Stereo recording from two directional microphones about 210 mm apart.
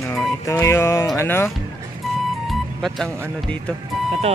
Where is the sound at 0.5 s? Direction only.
10° left (ahead or behind).